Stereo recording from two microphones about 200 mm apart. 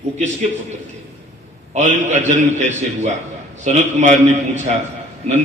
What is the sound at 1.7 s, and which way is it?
A man's voice, 35° right (ahead or behind).